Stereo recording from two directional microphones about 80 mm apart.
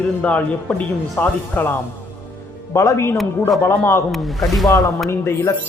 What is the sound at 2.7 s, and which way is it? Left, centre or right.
Speech, left.